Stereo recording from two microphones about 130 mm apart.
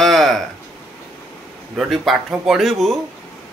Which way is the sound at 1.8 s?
Centre (ahead or behind).